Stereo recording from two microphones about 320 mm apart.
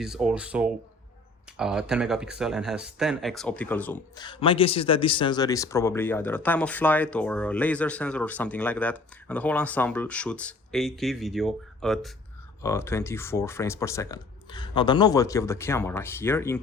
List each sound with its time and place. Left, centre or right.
0.0 s speech: centre